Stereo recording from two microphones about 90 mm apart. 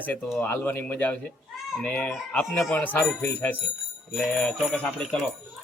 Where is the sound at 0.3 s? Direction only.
20° left (ahead or behind).